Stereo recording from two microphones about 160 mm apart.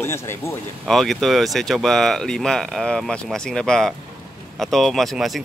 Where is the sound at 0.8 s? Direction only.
Centre (ahead or behind).